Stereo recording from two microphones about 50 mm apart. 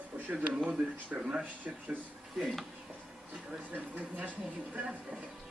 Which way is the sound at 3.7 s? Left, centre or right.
Right.